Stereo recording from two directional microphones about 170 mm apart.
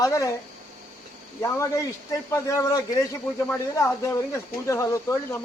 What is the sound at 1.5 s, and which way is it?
Speech, 15° left (ahead or behind).